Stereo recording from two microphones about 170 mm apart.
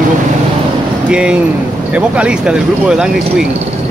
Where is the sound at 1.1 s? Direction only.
5° right (ahead or behind).